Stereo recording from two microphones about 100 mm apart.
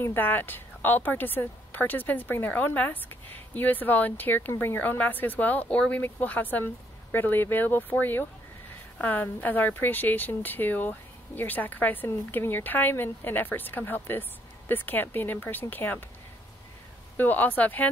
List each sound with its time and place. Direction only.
0.0 s a woman's voice: 20° left (ahead or behind)
17.2 s speech: 15° left (ahead or behind)